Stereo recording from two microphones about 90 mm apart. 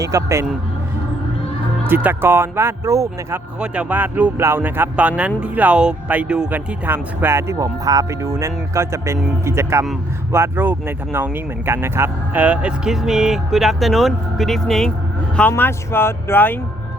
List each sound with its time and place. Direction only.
0.0 s speech: 35° right (ahead or behind)
1.9 s speech: 20° right (ahead or behind)
3.6 s speech: 15° right (ahead or behind); by 14.9 s 5° left (ahead or behind)
15.4 s speech: 20° left (ahead or behind)